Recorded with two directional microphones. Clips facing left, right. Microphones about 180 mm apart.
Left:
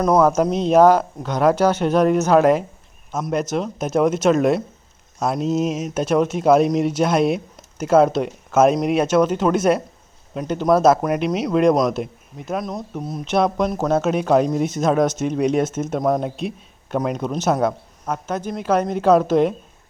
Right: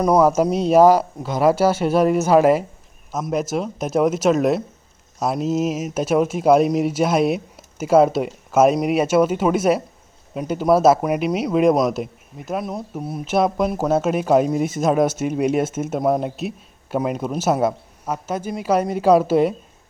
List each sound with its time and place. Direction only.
0.0 s speech: 10° right (ahead or behind)